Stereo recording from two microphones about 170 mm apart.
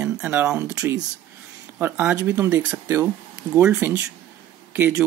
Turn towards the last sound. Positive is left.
turn(degrees=-10)  # may be behind; listen again after turning